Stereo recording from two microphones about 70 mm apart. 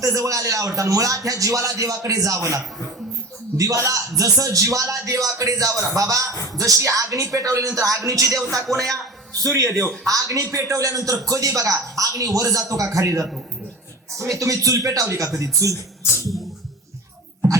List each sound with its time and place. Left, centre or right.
0.0 s speech: right
3.6 s speech: right